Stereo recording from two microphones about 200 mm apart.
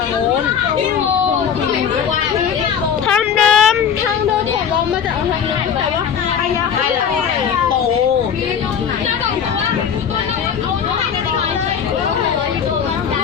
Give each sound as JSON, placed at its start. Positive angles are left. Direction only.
{"t": 3.1, "sound": "vehicle", "side_deg": 0}